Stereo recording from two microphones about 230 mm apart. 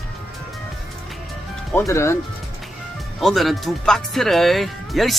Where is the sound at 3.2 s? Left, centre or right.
Centre.